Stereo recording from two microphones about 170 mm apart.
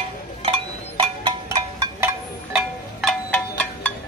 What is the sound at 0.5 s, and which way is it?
Music, 25° right (ahead or behind).